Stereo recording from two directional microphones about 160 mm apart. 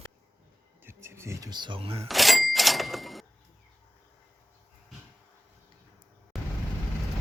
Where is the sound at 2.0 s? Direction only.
Centre (ahead or behind).